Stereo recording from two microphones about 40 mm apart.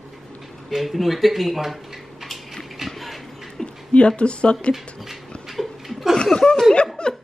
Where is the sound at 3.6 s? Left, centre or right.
Centre.